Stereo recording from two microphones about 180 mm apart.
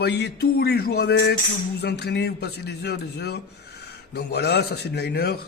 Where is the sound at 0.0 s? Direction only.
65° left (ahead or behind).